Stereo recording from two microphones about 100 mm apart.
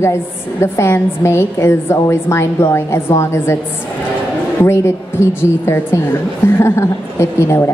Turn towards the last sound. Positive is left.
turn(degrees=25)  # may be behind; listen again after turning